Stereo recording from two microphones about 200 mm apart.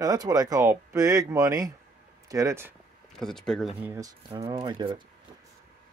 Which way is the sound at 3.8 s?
15° right (ahead or behind).